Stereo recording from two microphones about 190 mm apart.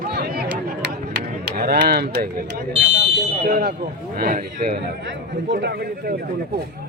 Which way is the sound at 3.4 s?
55° right (ahead or behind).